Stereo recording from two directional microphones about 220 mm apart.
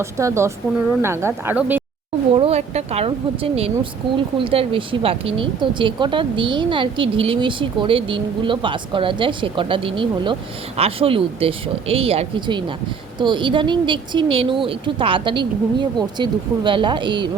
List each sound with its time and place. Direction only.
0.0 s speech: 15° right (ahead or behind)
2.3 s speech: 25° right (ahead or behind)